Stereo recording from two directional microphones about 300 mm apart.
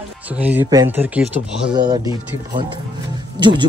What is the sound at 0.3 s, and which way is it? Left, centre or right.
A man's voice, centre.